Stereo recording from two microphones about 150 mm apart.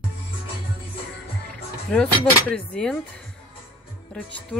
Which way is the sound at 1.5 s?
5° left (ahead or behind).